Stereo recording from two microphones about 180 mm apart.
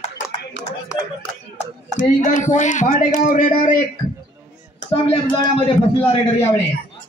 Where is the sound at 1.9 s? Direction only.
45° left (ahead or behind).